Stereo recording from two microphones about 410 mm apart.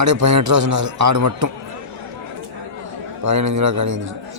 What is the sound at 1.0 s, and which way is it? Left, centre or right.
Speech, right.